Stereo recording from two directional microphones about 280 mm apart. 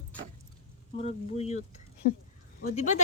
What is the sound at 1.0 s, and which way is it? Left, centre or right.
Speech, left.